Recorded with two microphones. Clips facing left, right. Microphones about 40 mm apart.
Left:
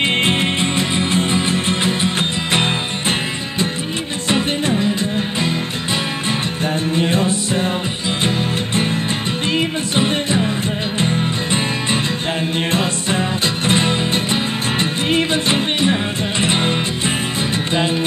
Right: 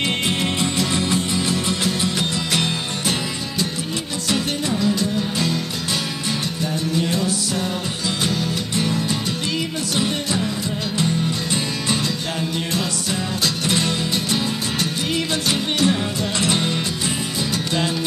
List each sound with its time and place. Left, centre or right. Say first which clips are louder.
0.2 s music: left 4 dB; left
4.3 s music: left 5 dB; left
6.6 s music: left 4 dB; left
13.7 s music: left 7 dB; left